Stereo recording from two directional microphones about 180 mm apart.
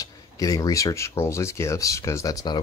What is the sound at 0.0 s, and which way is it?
Speech, 20° left (ahead or behind).